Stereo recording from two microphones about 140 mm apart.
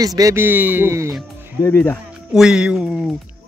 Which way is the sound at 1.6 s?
15° left (ahead or behind).